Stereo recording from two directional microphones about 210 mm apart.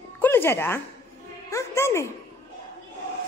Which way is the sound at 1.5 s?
15° left (ahead or behind).